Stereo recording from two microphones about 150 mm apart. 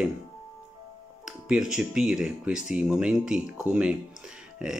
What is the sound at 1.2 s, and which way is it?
Speech, 5° right (ahead or behind).